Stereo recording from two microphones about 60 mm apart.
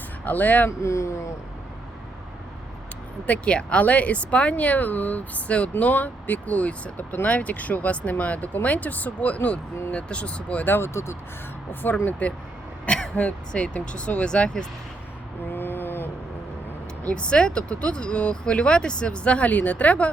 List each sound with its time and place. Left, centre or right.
0.3 s speech: left
0.8 s speech: left
3.2 s speech: left
10.8 s speech: left
11.7 s speech: left; by 14.7 s centre
15.5 s a sound: left
17.0 s speech: centre